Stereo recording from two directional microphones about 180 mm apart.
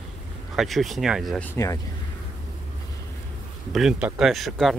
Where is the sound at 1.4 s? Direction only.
15° left (ahead or behind).